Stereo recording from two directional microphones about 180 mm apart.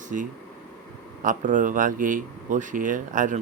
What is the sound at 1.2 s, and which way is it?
Speech, 45° right (ahead or behind).